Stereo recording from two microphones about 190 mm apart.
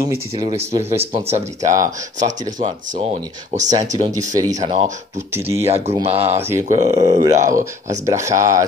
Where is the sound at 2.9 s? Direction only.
35° right (ahead or behind).